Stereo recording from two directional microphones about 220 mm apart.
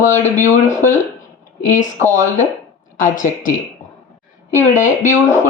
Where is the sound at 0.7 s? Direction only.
35° left (ahead or behind).